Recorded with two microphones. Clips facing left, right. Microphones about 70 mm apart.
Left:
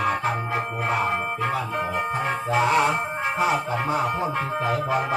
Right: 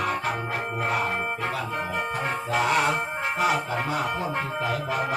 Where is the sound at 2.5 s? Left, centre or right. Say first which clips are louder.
Left 3 dB; left.